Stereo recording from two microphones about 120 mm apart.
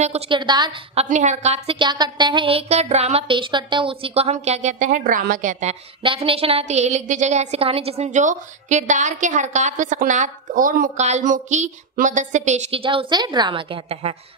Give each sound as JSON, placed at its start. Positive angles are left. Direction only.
{"t": 0.3, "sound": "music", "side_deg": -40}
{"t": 0.9, "sound": "a woman's voice", "side_deg": -85}
{"t": 1.8, "sound": "music", "side_deg": -40}
{"t": 2.7, "sound": "a woman's voice", "side_deg": -65}
{"t": 3.3, "sound": "a woman's voice", "side_deg": -45}
{"t": 6.0, "sound": "a woman's voice", "side_deg": -50}
{"t": 12.7, "sound": "a woman's voice", "side_deg": -45}